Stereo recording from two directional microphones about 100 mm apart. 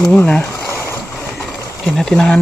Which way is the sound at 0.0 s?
10° left (ahead or behind).